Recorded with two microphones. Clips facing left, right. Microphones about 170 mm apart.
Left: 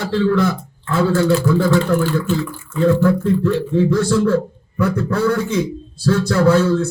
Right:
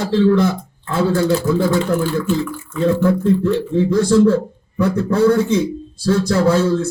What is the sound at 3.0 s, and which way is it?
Speech, 20° right (ahead or behind).